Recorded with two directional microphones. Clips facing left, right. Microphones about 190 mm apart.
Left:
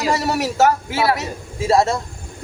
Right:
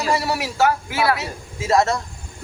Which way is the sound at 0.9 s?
25° left (ahead or behind).